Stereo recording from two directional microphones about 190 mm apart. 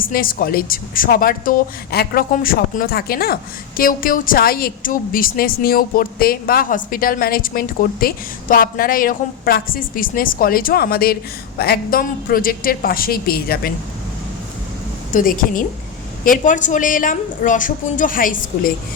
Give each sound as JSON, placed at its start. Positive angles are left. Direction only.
{"t": 0.0, "sound": "a woman's voice", "side_deg": 50}
{"t": 15.1, "sound": "a woman's voice", "side_deg": 45}